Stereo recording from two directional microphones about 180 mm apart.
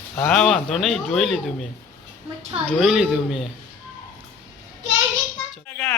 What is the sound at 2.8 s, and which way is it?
Speech, centre (ahead or behind).